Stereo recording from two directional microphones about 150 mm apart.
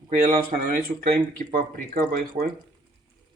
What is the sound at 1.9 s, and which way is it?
Speech, 80° right.